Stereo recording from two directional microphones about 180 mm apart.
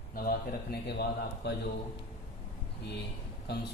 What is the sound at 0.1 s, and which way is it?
A man's voice, 55° left (ahead or behind).